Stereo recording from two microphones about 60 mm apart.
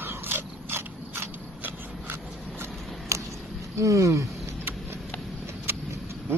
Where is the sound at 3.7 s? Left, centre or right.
Right.